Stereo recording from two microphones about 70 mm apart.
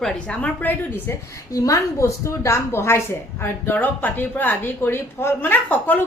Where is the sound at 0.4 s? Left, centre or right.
Left.